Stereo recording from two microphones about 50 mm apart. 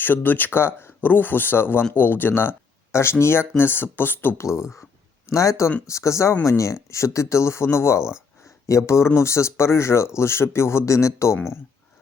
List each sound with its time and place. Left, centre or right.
0.0 s speech: left
4.4 s speech: left
5.3 s speech: left
6.4 s speech: left
8.4 s speech: left
9.0 s speech: left